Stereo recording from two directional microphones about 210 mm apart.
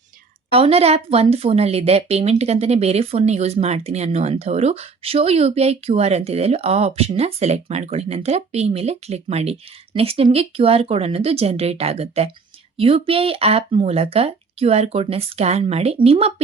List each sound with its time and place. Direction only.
0.5 s a woman's voice: 30° right (ahead or behind)